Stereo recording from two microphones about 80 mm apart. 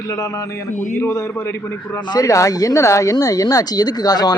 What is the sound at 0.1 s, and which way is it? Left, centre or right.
A man's voice, left.